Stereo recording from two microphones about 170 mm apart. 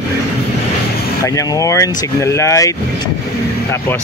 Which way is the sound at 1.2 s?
20° left (ahead or behind).